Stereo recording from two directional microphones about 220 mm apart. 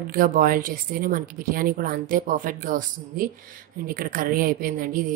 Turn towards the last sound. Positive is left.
turn(degrees=-40)  # may be behind; listen again after turning